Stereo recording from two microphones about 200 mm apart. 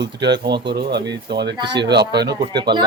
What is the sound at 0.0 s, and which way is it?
Speech, 60° right (ahead or behind).